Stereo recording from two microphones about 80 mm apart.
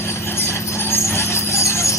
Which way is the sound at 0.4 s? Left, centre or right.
Left.